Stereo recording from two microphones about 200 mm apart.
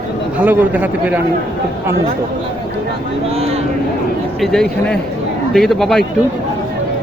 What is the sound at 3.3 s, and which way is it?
Speech, 30° right (ahead or behind).